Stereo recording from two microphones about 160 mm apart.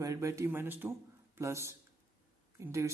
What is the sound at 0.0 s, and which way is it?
Speech, 20° right (ahead or behind).